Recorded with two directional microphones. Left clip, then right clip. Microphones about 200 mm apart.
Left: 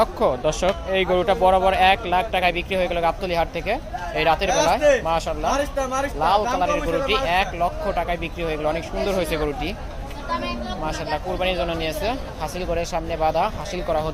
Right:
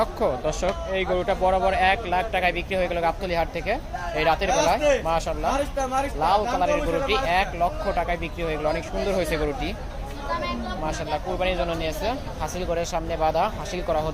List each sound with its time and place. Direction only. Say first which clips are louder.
0.0 s speech: left 4 dB; 20° left (ahead or behind)
5.5 s speech: left 3 dB; 25° left (ahead or behind)
6.1 s speech: left 3 dB; 10° left (ahead or behind)
10.8 s a man's voice: left 2 dB; 5° left (ahead or behind)